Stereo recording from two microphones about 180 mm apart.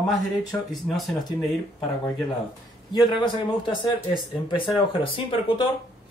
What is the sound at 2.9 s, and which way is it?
Speech, 25° left (ahead or behind).